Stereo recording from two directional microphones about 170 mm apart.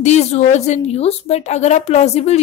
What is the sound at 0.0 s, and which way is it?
A woman's voice, 40° left (ahead or behind).